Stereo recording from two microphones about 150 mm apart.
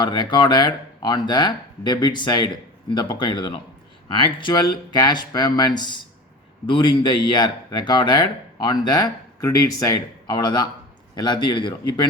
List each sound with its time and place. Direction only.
0.0 s speech: 30° left (ahead or behind)